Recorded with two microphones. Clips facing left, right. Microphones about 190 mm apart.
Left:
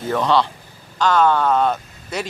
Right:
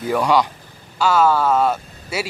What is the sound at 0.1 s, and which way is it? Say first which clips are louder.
Speech: right 1 dB; 10° right (ahead or behind).